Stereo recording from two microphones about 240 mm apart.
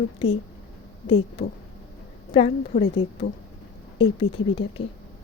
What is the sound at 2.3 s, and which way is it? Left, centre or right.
Speech, left.